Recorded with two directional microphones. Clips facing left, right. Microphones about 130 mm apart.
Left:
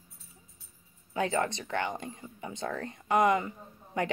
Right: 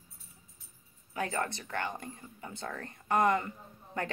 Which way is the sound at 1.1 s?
20° left (ahead or behind).